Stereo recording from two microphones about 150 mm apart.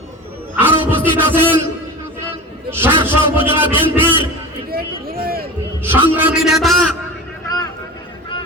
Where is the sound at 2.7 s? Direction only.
15° right (ahead or behind).